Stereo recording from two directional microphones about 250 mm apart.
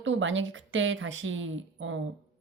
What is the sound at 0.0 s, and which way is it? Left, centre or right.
Speech, right.